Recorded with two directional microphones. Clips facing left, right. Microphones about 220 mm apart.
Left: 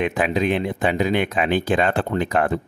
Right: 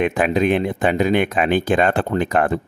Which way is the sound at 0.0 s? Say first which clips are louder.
Right 3 dB; 50° right (ahead or behind).